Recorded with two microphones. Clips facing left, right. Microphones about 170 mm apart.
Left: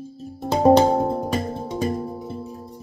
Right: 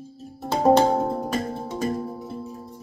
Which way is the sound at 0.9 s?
15° left (ahead or behind).